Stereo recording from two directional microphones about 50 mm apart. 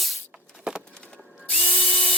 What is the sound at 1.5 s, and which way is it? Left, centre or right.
Drill, centre.